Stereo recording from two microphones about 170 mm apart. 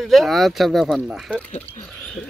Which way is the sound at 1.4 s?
40° left (ahead or behind).